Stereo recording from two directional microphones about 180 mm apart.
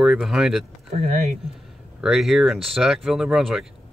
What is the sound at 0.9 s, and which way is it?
Speech, 40° right (ahead or behind).